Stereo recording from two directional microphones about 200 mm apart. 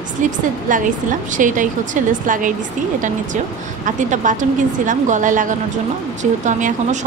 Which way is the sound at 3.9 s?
40° right (ahead or behind).